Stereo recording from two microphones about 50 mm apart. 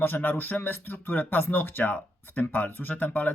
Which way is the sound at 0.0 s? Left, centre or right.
Left.